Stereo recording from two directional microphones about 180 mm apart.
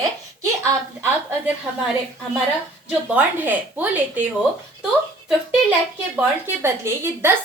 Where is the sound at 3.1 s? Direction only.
10° right (ahead or behind).